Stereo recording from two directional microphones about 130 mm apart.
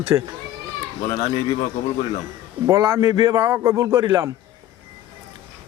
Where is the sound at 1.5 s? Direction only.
40° left (ahead or behind).